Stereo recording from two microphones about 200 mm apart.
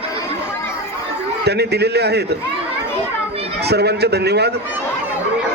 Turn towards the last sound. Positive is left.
turn(degrees=-55)  # may be behind; listen again after turning